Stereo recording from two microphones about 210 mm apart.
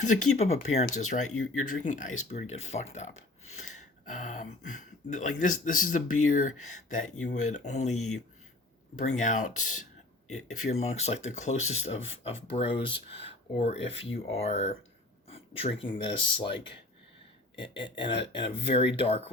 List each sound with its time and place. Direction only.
0.0 s speech: 35° left (ahead or behind)
7.9 s speech: 90° left
9.0 s speech: 35° left (ahead or behind)
17.6 s speech: 25° left (ahead or behind)